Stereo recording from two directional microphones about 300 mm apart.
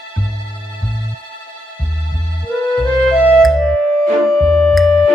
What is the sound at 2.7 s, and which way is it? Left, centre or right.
Music, centre.